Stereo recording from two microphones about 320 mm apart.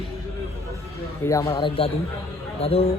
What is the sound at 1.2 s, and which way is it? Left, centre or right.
A man's voice, centre.